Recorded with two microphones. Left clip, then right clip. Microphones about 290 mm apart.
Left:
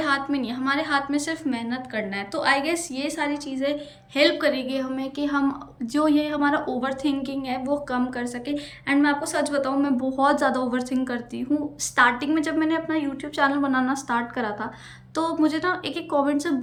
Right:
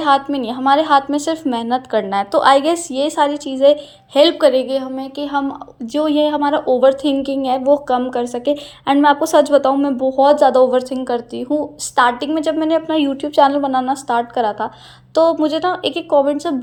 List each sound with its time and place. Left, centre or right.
0.0 s a woman's voice: centre
13.2 s speech: right
13.7 s a woman's voice: centre